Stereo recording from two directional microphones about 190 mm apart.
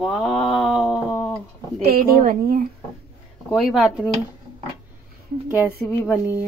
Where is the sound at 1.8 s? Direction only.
50° right (ahead or behind).